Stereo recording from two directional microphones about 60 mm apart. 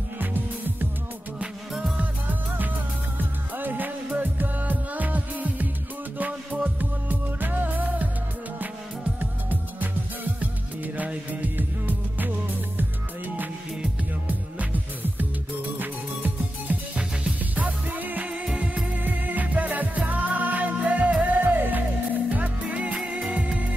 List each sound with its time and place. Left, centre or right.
0.2 s music: right
3.5 s music: right
9.2 s music: right
11.0 s music: right
14.2 s music: right
18.3 s music: centre
19.0 s music: right